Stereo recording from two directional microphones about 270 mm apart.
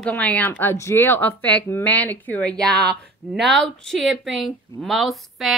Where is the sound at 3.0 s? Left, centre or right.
Centre.